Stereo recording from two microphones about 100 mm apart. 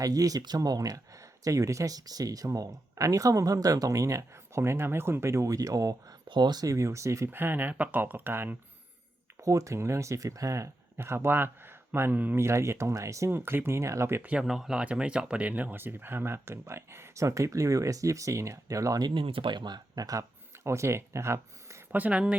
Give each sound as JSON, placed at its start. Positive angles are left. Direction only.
{"t": 0.0, "sound": "speech", "side_deg": -35}
{"t": 6.2, "sound": "speech", "side_deg": -50}
{"t": 9.4, "sound": "speech", "side_deg": -30}
{"t": 14.2, "sound": "speech", "side_deg": -10}
{"t": 19.0, "sound": "speech", "side_deg": -60}
{"t": 20.7, "sound": "speech", "side_deg": -30}
{"t": 21.9, "sound": "speech", "side_deg": -15}